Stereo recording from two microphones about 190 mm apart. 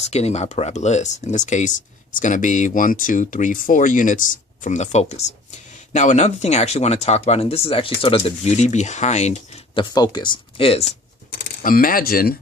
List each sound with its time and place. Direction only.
0.0 s speech: 35° left (ahead or behind)
9.9 s speech: 20° left (ahead or behind)
11.3 s speech: 50° left (ahead or behind)